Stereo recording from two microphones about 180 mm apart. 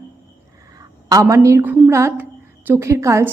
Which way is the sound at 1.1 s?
15° right (ahead or behind).